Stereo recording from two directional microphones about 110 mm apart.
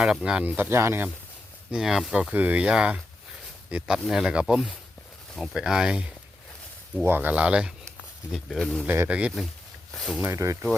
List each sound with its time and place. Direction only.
0.0 s speech: 5° right (ahead or behind); by 1.0 s 25° right (ahead or behind)
1.7 s speech: 5° right (ahead or behind)
2.3 s speech: 15° right (ahead or behind)
8.3 s speech: 5° left (ahead or behind)
8.9 s speech: 15° right (ahead or behind)
9.9 s speech: centre (ahead or behind)
10.3 s speech: 25° right (ahead or behind)